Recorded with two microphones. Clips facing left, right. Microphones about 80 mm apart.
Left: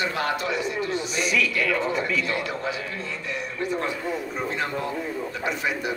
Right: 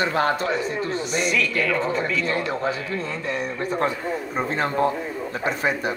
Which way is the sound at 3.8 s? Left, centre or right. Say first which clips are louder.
Right 3 dB; right.